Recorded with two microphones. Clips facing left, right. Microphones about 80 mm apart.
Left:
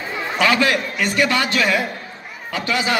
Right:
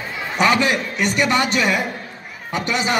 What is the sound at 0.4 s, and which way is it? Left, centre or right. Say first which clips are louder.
A man's voice: even; centre.